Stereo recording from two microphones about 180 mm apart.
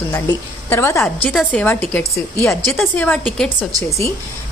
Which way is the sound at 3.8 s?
15° left (ahead or behind).